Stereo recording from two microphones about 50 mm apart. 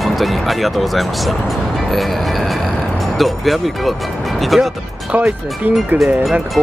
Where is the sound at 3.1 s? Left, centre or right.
Centre.